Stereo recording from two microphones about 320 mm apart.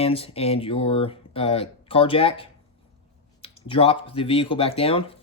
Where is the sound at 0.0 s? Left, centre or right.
Centre.